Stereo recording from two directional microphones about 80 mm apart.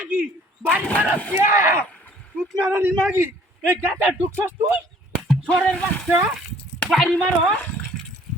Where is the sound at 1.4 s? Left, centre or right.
Right.